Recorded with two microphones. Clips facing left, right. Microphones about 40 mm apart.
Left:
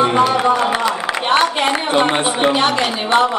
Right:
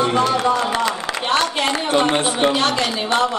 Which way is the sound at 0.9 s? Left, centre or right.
Centre.